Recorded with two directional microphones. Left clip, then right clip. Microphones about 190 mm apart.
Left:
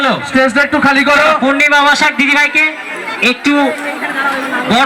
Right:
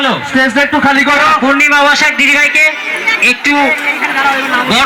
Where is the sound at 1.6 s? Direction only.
45° left (ahead or behind); by 3.6 s 60° left (ahead or behind).